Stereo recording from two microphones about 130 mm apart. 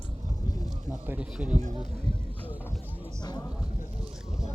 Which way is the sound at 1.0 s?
10° right (ahead or behind).